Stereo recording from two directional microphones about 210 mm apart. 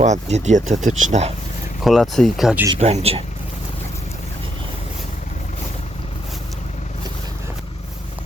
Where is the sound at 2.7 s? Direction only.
30° right (ahead or behind).